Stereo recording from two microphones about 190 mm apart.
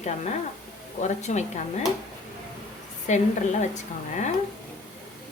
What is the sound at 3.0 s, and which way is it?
A woman's voice, 40° left (ahead or behind).